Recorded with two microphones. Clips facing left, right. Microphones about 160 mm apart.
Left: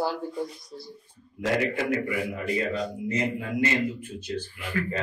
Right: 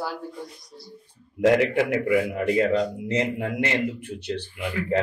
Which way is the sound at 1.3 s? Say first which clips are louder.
Right 7 dB; 65° right (ahead or behind).